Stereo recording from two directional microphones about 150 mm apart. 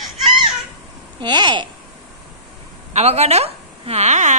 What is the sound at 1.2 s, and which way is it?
Speech, 30° right (ahead or behind).